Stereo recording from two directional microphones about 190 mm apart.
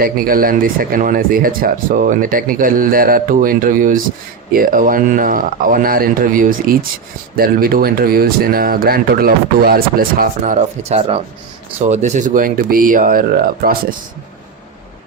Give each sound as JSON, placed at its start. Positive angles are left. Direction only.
{"t": 0.0, "sound": "speech", "side_deg": -50}